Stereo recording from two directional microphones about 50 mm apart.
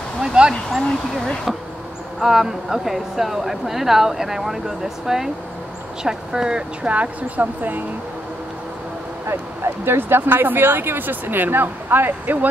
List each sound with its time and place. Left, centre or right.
0.2 s speech: centre
2.2 s speech: centre
6.9 s speech: right
9.3 s speech: right